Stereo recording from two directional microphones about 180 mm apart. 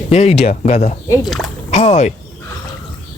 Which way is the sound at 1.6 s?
35° left (ahead or behind).